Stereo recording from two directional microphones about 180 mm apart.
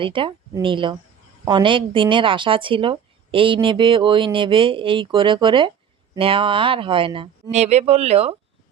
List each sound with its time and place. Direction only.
0.0 s a woman's voice: 30° right (ahead or behind)